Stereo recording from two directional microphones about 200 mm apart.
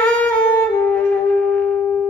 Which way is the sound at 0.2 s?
10° left (ahead or behind).